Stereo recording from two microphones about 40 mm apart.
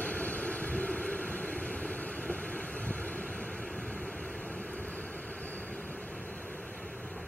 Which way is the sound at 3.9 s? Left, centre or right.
Left.